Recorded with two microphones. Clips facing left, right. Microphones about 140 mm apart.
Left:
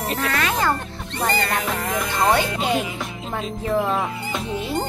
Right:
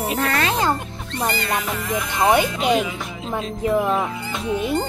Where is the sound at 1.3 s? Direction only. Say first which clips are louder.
Left 1 dB; 50° left (ahead or behind).